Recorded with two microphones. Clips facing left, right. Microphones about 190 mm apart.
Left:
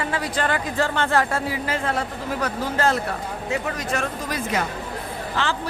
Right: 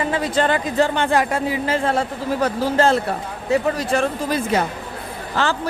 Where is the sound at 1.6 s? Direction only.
30° right (ahead or behind).